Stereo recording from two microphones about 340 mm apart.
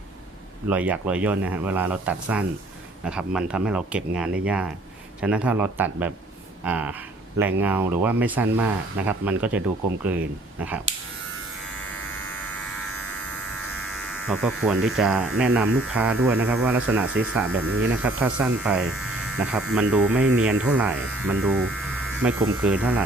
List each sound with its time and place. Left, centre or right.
0.7 s speech: centre
11.7 s electric shaver: centre
13.8 s speech: centre
17.5 s speech: right
17.7 s speech: centre